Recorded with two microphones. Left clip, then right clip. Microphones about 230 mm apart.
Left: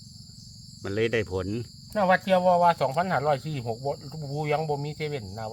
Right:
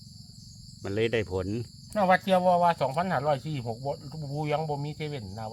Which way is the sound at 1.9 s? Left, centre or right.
Centre.